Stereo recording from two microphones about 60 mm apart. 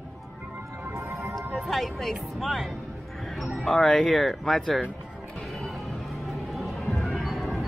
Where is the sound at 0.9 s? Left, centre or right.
Right.